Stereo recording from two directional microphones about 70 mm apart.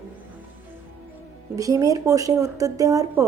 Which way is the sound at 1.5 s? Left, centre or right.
Right.